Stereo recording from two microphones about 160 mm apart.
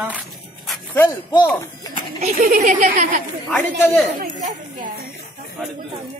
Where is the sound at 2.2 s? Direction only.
50° right (ahead or behind).